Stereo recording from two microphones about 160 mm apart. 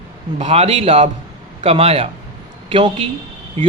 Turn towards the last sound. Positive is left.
turn(degrees=-40)  # may be behind; listen again after turning